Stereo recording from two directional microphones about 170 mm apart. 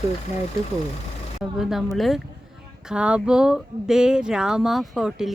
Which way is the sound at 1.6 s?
Centre (ahead or behind).